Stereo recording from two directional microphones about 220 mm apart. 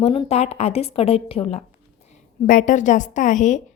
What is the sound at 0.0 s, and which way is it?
A woman's voice, 30° left (ahead or behind).